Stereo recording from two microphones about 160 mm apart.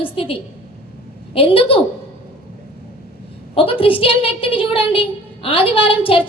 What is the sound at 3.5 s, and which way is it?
A woman's voice, 35° left (ahead or behind).